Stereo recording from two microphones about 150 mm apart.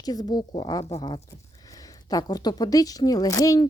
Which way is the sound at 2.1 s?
25° left (ahead or behind).